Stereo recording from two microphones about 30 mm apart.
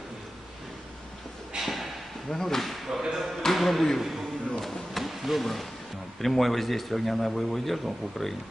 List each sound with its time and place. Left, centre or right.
1.6 s a sound: centre
2.3 s speech: centre
2.9 s speech: centre
3.4 s speech: centre
3.9 s a sound: centre
6.2 s speech: centre